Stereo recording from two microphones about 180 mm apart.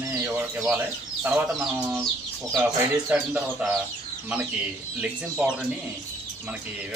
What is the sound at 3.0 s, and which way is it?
Speech, 5° right (ahead or behind).